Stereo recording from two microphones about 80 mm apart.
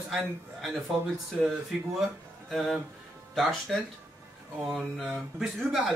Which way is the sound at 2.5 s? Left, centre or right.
Centre.